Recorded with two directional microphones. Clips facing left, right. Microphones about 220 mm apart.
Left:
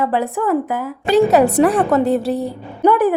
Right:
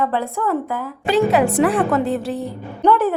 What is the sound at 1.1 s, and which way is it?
A woman's voice, 40° left (ahead or behind).